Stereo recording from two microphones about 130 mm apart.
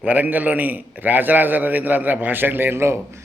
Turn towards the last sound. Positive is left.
turn(degrees=-20)  # may be behind; listen again after turning